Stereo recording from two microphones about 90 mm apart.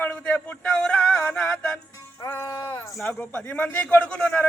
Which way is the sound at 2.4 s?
45° left (ahead or behind).